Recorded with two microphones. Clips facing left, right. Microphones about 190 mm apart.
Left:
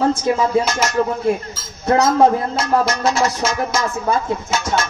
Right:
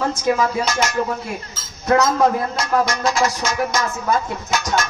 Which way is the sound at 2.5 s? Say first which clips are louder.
Left 2 dB; 5° left (ahead or behind).